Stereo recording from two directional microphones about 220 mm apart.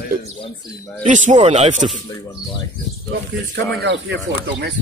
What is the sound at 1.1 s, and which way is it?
Speech, 35° right (ahead or behind).